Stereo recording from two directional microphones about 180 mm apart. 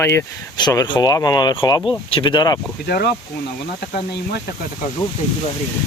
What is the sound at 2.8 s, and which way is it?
Speech, 60° left (ahead or behind).